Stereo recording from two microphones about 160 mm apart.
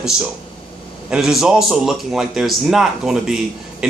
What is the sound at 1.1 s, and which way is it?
Speech, 5° right (ahead or behind).